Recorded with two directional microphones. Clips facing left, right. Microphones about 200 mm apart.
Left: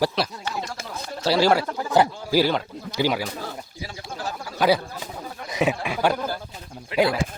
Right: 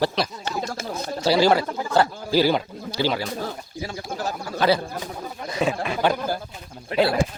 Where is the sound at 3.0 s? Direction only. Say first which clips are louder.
Left 1 dB; 15° left (ahead or behind).